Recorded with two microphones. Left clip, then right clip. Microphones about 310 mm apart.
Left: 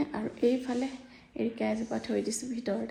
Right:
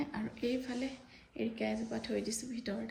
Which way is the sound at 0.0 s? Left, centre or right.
Centre.